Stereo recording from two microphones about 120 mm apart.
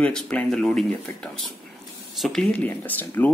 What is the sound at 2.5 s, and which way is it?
Speech, 15° left (ahead or behind).